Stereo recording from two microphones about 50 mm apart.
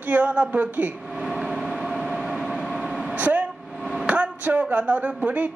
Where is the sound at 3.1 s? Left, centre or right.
Right.